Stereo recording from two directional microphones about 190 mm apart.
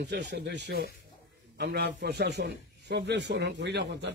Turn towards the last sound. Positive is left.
turn(degrees=-65)  # may be behind; listen again after turning